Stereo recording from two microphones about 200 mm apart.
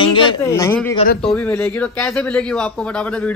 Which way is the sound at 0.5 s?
15° left (ahead or behind).